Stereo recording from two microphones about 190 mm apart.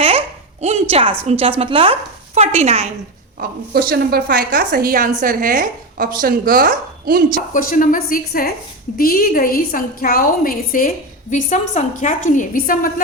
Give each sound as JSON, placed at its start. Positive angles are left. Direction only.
{"t": 0.0, "sound": "babbling", "side_deg": -30}
{"t": 1.2, "sound": "a woman's voice", "side_deg": -30}
{"t": 3.3, "sound": "a woman's voice", "side_deg": -50}
{"t": 7.5, "sound": "a woman's voice", "side_deg": 45}